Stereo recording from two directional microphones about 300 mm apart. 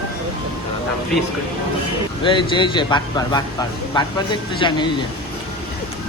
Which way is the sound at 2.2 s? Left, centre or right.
Centre.